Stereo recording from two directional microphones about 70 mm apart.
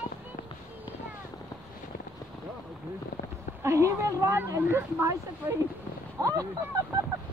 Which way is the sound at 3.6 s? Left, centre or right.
Right.